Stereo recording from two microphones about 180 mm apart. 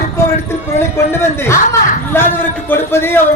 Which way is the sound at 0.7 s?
15° left (ahead or behind).